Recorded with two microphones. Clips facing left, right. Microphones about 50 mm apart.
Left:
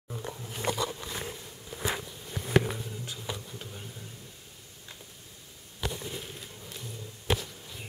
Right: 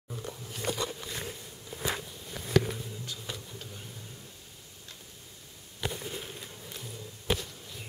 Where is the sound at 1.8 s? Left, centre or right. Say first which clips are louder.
Left 1 dB; centre.